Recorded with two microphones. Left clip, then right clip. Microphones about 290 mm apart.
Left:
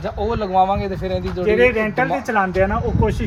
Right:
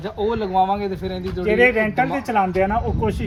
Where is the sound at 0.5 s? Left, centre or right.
Left.